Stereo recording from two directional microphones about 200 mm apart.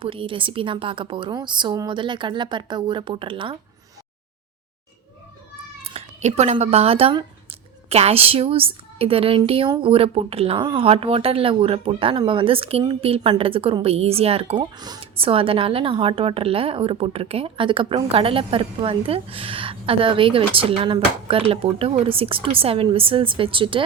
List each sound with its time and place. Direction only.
0.0 s a woman's voice: 25° right (ahead or behind)
5.9 s a woman's voice: 30° right (ahead or behind)